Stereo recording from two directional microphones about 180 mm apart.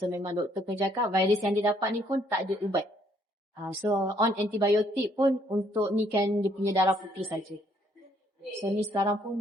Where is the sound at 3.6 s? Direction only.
15° right (ahead or behind).